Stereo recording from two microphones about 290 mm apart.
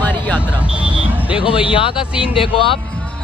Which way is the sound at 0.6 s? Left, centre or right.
Centre.